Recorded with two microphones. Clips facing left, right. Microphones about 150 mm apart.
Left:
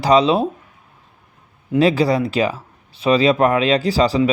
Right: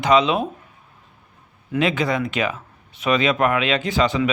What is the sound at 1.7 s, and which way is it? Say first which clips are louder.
Speech: left 6 dB; 35° left (ahead or behind).